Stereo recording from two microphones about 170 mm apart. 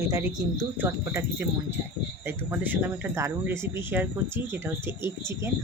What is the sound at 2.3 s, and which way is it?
Speech, 10° right (ahead or behind).